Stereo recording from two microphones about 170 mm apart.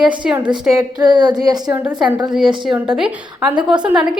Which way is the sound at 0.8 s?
25° right (ahead or behind).